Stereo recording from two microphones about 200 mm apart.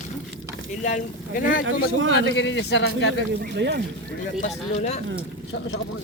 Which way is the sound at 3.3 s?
55° right (ahead or behind).